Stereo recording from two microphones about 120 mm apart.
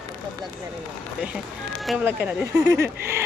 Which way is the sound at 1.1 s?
5° right (ahead or behind).